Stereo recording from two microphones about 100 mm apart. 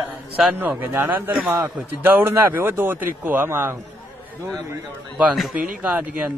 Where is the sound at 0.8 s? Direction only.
20° right (ahead or behind).